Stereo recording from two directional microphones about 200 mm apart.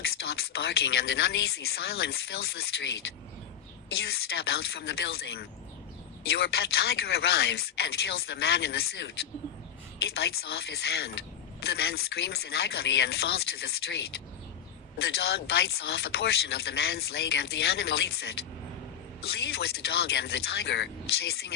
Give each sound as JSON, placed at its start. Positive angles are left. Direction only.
{"t": 0.2, "sound": "speech", "side_deg": 55}
{"t": 3.9, "sound": "speech", "side_deg": 55}
{"t": 10.2, "sound": "speech", "side_deg": 55}